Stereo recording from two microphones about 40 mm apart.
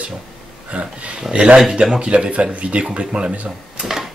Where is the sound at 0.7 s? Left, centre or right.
Right.